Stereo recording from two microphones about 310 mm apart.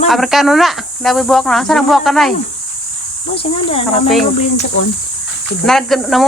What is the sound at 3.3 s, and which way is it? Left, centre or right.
Speech, centre.